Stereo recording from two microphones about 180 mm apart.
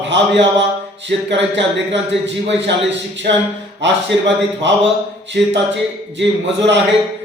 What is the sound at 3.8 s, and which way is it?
Speech, 80° right.